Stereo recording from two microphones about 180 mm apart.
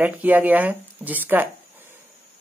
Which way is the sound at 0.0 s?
10° right (ahead or behind).